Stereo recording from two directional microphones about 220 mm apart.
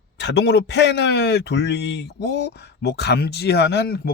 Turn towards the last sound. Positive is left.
turn(degrees=45)  # may be behind; listen again after turning